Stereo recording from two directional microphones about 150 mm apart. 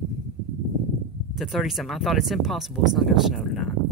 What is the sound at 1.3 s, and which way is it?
Speech, centre (ahead or behind).